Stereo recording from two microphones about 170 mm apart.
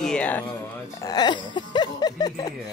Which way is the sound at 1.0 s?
25° left (ahead or behind).